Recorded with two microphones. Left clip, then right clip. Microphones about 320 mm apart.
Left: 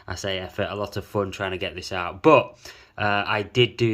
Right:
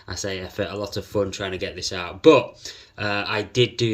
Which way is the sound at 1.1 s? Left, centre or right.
Centre.